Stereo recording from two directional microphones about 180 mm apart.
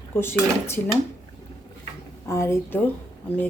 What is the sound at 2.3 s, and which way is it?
Speech, 15° left (ahead or behind).